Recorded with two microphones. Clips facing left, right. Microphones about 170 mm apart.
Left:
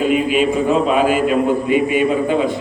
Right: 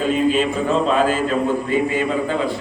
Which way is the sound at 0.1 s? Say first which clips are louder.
Left 2 dB; 10° left (ahead or behind).